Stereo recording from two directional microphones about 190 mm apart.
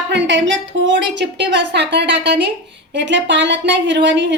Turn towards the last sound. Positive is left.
turn(degrees=-65)  # may be behind; listen again after turning